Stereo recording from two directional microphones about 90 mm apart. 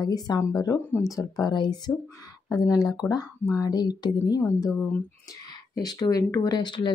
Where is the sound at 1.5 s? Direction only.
55° left (ahead or behind).